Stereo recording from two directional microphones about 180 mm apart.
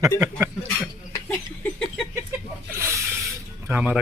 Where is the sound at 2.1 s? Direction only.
15° right (ahead or behind).